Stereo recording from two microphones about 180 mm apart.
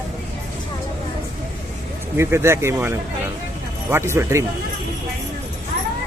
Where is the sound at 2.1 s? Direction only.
15° right (ahead or behind).